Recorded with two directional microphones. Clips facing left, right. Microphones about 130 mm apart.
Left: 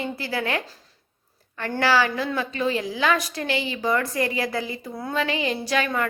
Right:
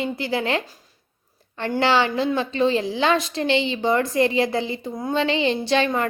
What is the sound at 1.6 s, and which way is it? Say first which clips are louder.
A woman's voice: right 2 dB; 25° right (ahead or behind).